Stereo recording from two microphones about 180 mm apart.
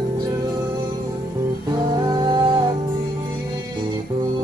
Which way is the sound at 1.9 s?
20° right (ahead or behind).